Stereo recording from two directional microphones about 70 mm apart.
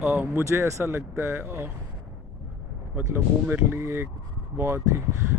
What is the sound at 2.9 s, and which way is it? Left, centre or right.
Speech, right.